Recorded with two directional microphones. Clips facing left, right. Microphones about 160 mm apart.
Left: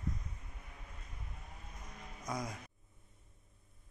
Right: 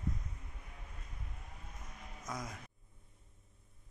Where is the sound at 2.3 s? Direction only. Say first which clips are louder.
Left 3 dB; 15° left (ahead or behind).